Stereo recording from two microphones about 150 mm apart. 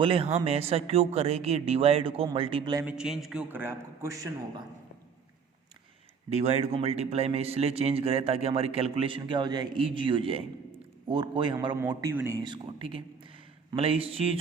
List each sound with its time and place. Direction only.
0.0 s a man's voice: 40° right (ahead or behind)
2.8 s a man's voice: 5° right (ahead or behind)
3.5 s a man's voice: 15° right (ahead or behind)
6.3 s a man's voice: 50° right (ahead or behind)